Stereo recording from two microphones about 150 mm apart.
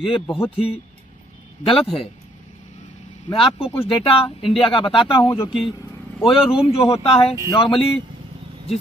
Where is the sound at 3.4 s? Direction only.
40° left (ahead or behind).